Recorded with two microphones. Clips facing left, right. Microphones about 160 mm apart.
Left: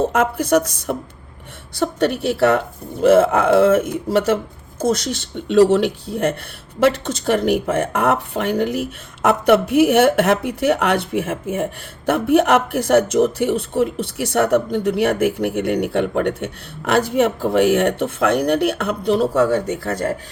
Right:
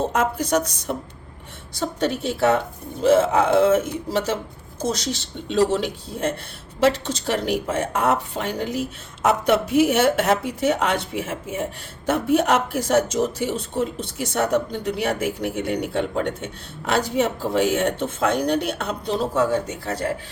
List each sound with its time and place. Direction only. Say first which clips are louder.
0.0 s speech: left 4 dB; 55° left (ahead or behind)